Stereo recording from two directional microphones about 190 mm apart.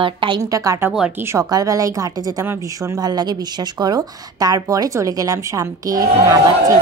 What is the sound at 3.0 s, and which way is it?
A woman's voice, 20° right (ahead or behind).